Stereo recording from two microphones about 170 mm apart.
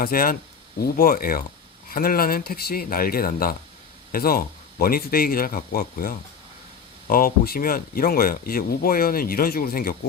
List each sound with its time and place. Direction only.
0.0 s speech: 60° left (ahead or behind)